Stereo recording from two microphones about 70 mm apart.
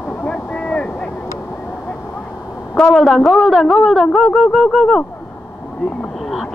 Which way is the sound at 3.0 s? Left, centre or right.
Centre.